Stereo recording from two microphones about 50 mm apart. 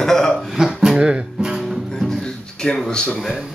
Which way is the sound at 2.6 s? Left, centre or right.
Centre.